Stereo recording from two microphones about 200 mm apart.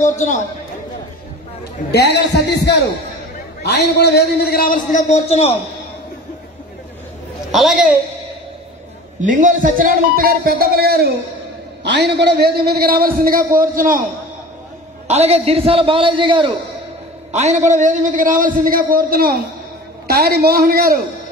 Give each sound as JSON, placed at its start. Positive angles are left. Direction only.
{"t": 0.0, "sound": "a man's voice", "side_deg": 40}
{"t": 1.9, "sound": "a man's voice", "side_deg": 55}
{"t": 7.5, "sound": "a woman's voice", "side_deg": 0}
{"t": 9.2, "sound": "a man's voice", "side_deg": -40}
{"t": 15.0, "sound": "a man's voice", "side_deg": -30}